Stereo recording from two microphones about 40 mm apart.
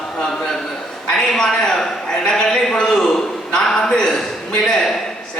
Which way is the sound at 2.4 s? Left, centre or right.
Centre.